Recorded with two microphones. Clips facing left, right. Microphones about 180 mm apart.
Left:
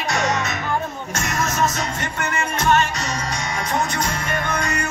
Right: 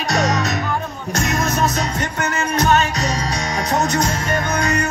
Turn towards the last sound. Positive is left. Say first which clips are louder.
# right 4 dB
turn(degrees=-40)  # may be behind; listen again after turning